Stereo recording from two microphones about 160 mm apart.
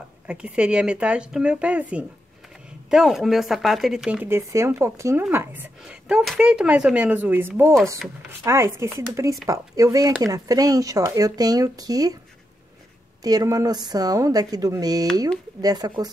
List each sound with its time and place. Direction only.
0.3 s speech: 5° right (ahead or behind); by 12.2 s 25° right (ahead or behind)
13.2 s speech: 25° right (ahead or behind)